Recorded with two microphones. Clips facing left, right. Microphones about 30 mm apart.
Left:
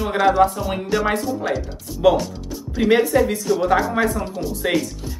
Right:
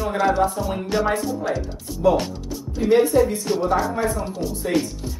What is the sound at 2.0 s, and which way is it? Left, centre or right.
Speech, left.